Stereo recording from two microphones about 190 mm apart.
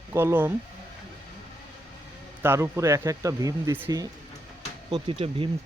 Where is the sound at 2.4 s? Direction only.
15° right (ahead or behind).